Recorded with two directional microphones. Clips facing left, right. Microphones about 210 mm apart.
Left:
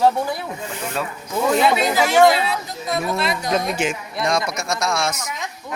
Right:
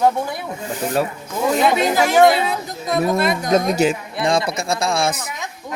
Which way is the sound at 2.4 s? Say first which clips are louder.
Right 2 dB; 45° right (ahead or behind).